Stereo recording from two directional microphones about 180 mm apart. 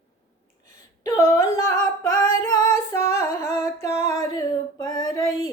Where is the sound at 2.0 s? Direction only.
20° left (ahead or behind).